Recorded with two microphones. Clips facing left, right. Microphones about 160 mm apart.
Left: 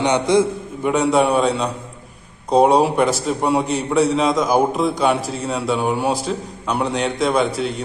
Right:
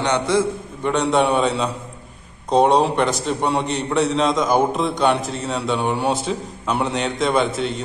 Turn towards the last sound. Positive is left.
turn(degrees=0)  # may be behind; listen again after turning